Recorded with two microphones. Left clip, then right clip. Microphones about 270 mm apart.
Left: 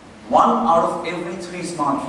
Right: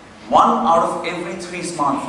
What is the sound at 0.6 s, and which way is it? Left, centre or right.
A man's voice, centre.